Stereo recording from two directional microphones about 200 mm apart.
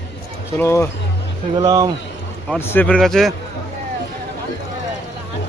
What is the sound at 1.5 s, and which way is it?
Speech, 20° right (ahead or behind).